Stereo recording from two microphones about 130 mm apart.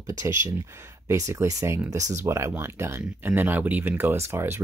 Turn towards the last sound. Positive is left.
turn(degrees=-20)  # may be behind; listen again after turning